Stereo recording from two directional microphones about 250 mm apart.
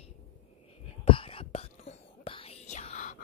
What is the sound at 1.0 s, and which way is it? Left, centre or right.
Whispering, left.